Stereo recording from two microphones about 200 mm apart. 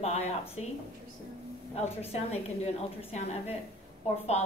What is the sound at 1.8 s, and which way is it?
A woman's voice, 30° left (ahead or behind).